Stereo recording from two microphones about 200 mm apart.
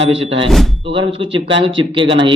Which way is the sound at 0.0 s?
25° right (ahead or behind).